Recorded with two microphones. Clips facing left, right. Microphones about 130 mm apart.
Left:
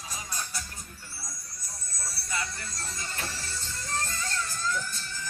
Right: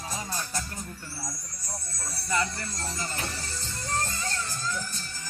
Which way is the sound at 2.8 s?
35° right (ahead or behind).